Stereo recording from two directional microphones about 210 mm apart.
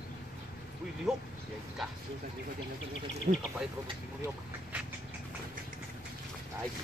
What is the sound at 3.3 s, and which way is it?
Speech, 40° right (ahead or behind).